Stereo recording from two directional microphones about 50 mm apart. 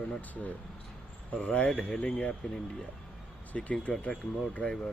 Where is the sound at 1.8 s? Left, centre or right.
Centre.